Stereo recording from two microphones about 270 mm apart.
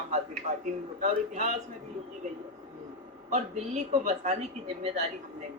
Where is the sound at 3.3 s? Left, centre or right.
Right.